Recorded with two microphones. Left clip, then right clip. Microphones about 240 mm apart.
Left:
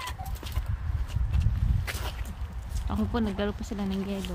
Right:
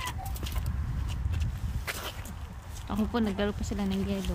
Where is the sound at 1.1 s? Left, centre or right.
Centre.